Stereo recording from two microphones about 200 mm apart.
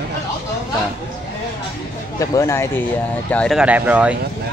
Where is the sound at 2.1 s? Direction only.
15° left (ahead or behind); by 4.2 s 5° right (ahead or behind).